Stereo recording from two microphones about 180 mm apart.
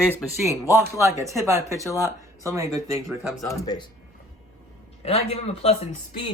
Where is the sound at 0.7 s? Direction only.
15° right (ahead or behind).